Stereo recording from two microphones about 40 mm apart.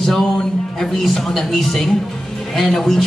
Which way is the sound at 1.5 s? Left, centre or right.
Centre.